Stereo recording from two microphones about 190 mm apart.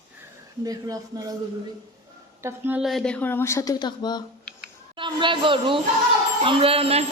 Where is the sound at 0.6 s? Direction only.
20° right (ahead or behind).